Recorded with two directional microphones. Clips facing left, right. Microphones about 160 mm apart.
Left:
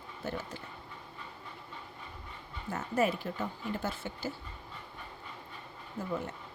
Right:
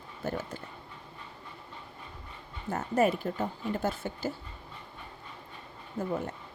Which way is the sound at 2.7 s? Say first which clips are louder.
Right 4 dB; 45° right (ahead or behind).